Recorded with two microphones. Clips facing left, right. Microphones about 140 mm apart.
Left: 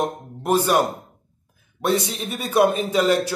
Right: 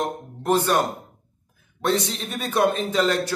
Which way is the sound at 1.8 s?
10° left (ahead or behind).